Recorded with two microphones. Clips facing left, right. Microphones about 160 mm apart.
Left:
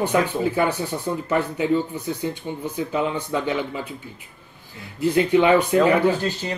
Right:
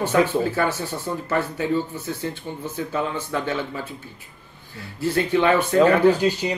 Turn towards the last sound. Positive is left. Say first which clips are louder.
# right 4 dB
turn(degrees=-15)  # may be behind; listen again after turning